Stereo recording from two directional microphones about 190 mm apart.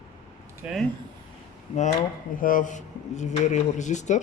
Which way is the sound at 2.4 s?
45° left (ahead or behind).